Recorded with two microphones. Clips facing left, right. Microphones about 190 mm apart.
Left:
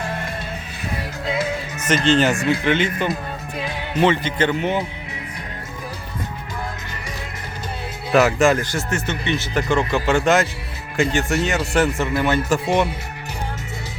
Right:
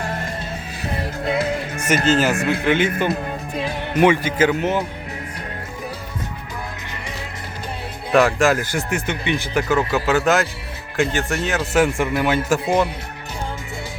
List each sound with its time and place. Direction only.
1.2 s music: 55° right (ahead or behind)
2.0 s a man's voice: 5° right (ahead or behind)
4.0 s speech: 10° right (ahead or behind)
8.1 s a man's voice: centre (ahead or behind)
8.7 s a man's voice: 10° right (ahead or behind)